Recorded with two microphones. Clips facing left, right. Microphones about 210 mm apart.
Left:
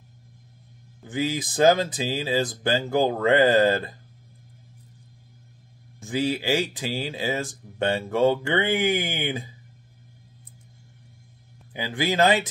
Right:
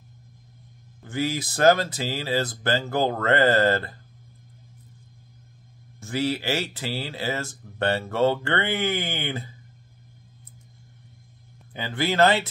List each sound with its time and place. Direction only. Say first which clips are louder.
1.0 s speech: even; 15° left (ahead or behind)
5.9 s speech: left 1 dB; 15° left (ahead or behind)
11.7 s speech: even; 15° left (ahead or behind)